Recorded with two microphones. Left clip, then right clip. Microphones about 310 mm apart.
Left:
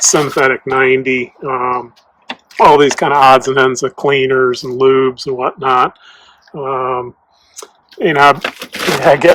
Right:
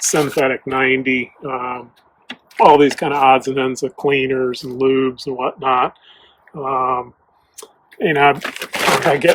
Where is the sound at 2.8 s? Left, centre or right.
Left.